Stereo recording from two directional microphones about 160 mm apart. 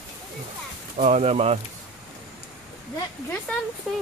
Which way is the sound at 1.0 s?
40° right (ahead or behind).